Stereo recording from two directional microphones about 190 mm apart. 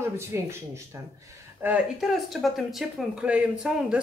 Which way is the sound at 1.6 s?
10° right (ahead or behind).